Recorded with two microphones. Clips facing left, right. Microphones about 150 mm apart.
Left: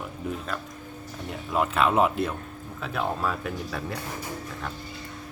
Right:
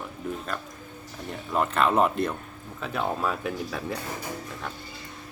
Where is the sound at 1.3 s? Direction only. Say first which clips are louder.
Even; 5° left (ahead or behind).